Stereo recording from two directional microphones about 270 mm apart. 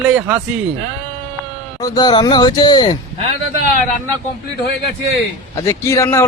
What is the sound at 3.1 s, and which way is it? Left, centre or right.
Speech, right.